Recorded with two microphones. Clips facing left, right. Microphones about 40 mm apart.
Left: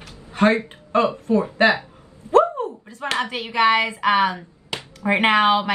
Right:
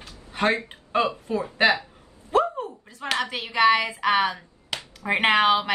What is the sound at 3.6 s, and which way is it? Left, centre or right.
Speech, left.